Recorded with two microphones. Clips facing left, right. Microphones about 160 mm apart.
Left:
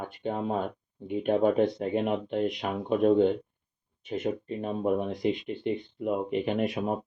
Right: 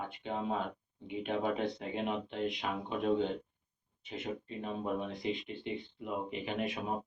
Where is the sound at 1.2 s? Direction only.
50° left (ahead or behind).